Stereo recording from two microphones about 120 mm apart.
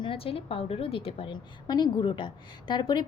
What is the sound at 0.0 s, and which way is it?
A woman's voice, 50° left (ahead or behind).